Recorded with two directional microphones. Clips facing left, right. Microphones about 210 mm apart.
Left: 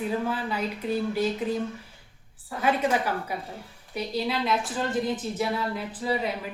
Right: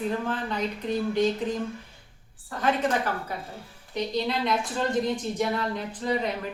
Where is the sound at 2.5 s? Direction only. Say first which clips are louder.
Left 1 dB; 10° left (ahead or behind).